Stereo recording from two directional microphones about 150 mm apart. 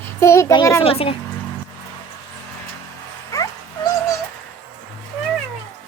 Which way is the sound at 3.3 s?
20° left (ahead or behind).